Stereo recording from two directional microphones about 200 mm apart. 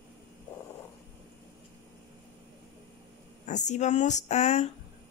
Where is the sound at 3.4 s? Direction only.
35° left (ahead or behind).